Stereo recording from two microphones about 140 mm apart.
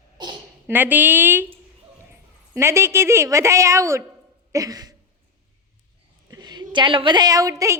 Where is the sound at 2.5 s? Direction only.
20° right (ahead or behind).